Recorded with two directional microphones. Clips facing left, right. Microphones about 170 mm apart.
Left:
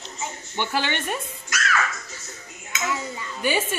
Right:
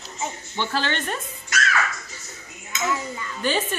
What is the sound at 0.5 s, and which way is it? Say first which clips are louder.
Speech: even; 15° left (ahead or behind).